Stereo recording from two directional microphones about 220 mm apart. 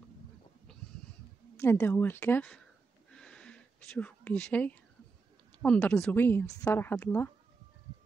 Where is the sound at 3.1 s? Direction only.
5° left (ahead or behind).